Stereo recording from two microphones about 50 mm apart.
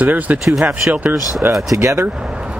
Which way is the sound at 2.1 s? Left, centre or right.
Centre.